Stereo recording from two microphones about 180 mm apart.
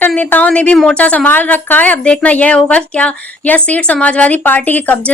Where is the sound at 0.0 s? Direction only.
10° left (ahead or behind).